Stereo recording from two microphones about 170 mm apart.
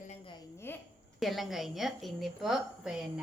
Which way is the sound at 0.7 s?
10° left (ahead or behind).